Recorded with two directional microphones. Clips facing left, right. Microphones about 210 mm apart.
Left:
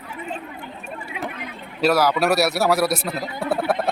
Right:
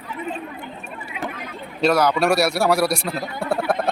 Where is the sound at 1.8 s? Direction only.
5° left (ahead or behind).